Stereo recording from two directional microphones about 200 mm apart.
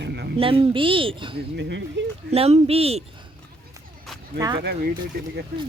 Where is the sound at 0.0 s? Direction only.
55° right (ahead or behind).